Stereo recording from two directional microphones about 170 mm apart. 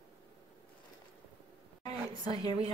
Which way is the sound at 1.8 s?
25° left (ahead or behind).